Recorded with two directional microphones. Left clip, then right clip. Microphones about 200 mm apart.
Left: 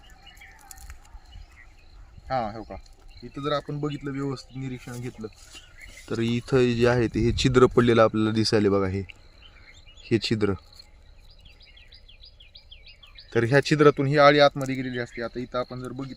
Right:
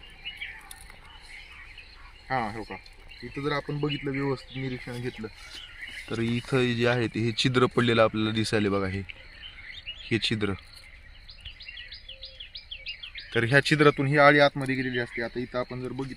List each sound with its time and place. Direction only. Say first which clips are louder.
2.2 s speech: left 1 dB; 30° left (ahead or behind)
3.8 s speech: right 1 dB; 20° left (ahead or behind)
12.5 s insect: right 9 dB; 40° right (ahead or behind)
13.3 s speech: left 1 dB; 30° left (ahead or behind)